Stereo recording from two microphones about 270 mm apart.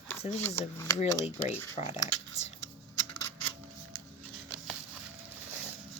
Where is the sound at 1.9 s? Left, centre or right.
Left.